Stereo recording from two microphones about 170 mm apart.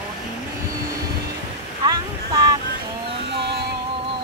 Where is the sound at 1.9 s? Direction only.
20° right (ahead or behind).